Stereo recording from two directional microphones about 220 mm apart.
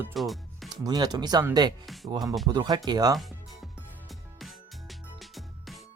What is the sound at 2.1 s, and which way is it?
Speech, 15° right (ahead or behind).